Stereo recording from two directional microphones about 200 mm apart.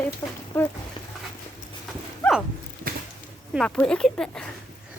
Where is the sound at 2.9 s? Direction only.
50° right (ahead or behind).